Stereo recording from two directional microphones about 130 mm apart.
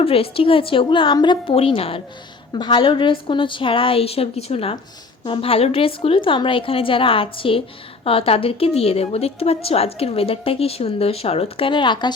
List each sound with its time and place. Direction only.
0.0 s a woman's voice: 45° left (ahead or behind)